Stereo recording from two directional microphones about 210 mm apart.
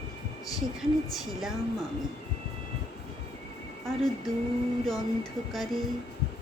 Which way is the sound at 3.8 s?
Centre (ahead or behind).